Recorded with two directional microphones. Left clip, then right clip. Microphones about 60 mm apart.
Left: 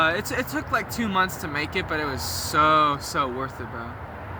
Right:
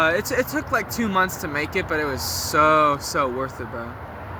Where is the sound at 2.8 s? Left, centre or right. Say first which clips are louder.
Right 3 dB; left.